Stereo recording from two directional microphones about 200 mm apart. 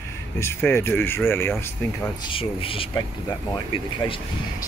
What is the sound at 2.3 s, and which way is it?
Speech, 25° left (ahead or behind).